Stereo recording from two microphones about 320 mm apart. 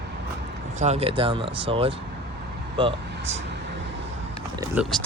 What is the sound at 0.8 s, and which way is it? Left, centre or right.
Speech, centre.